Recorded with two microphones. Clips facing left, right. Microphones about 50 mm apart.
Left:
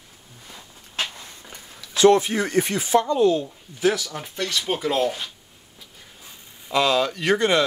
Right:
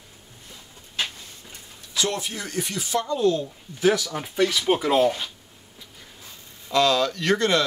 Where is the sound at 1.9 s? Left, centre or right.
Left.